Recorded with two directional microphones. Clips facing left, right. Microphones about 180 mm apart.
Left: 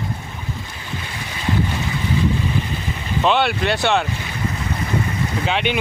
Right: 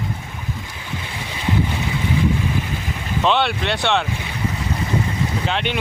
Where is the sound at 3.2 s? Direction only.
5° left (ahead or behind).